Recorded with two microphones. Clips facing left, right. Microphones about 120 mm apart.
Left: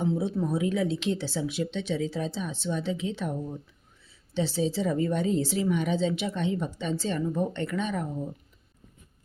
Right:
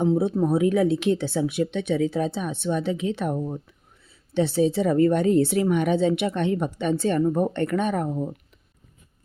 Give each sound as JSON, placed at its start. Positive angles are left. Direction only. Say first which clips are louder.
{"t": 0.0, "sound": "speech", "louder": "right 6 dB", "side_deg": -50}